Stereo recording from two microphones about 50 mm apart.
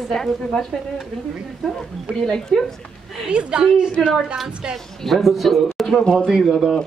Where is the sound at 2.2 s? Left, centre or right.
Centre.